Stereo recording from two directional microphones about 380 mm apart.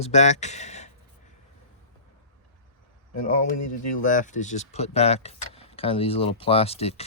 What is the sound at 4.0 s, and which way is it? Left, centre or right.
Speech, centre.